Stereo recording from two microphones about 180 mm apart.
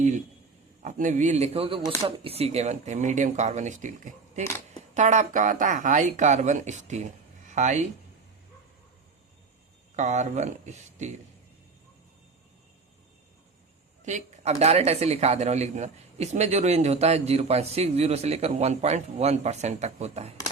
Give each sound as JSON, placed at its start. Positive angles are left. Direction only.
{"t": 0.8, "sound": "speech", "side_deg": -45}
{"t": 4.4, "sound": "speech", "side_deg": 15}
{"t": 4.9, "sound": "speech", "side_deg": -40}
{"t": 9.9, "sound": "speech", "side_deg": -40}
{"t": 14.0, "sound": "speech", "side_deg": -40}